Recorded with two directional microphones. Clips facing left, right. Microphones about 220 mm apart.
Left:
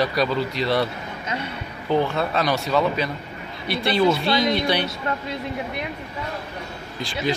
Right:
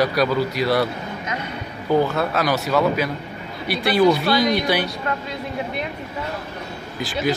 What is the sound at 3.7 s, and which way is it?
Speech, 25° left (ahead or behind).